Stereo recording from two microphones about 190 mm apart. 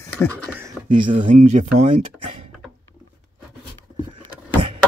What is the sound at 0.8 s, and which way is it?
Speech, 25° right (ahead or behind).